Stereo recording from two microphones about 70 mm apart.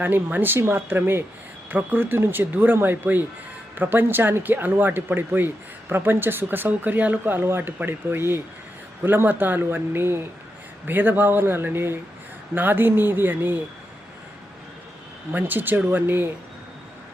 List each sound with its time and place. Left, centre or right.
0.0 s speech: right
15.3 s speech: right